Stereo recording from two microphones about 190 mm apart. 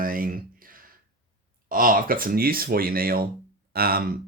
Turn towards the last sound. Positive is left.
turn(degrees=-55)  # may be behind; listen again after turning